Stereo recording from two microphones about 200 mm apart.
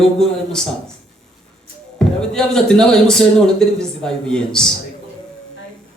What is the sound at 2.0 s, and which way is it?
Speech, 5° left (ahead or behind).